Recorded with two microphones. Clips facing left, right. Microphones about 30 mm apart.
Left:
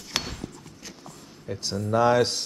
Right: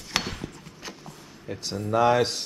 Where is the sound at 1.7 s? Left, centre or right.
Right.